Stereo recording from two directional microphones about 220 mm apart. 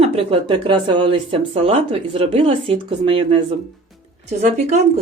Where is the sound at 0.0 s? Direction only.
25° right (ahead or behind).